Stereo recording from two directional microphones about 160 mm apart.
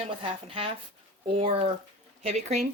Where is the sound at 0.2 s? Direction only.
35° right (ahead or behind).